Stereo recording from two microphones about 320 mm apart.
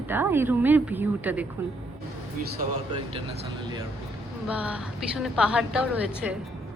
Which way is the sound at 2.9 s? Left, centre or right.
Centre.